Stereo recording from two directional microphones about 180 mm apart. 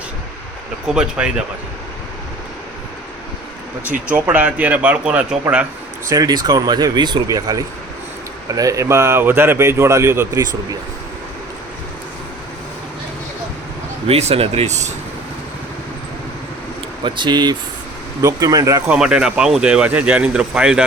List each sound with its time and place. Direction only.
0.9 s speech: 5° right (ahead or behind)
3.8 s speech: 10° right (ahead or behind)
6.1 s speech: 20° right (ahead or behind)
14.1 s speech: 35° right (ahead or behind)
17.0 s speech: 25° right (ahead or behind)
18.9 s speech: 5° right (ahead or behind)